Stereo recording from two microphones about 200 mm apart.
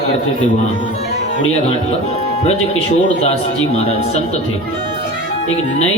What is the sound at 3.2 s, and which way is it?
Speech, 30° left (ahead or behind).